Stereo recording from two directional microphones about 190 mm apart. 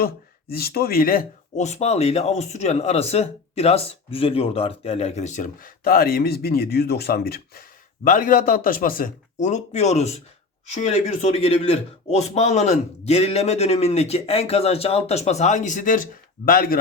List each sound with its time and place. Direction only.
0.0 s a man's voice: 55° left (ahead or behind)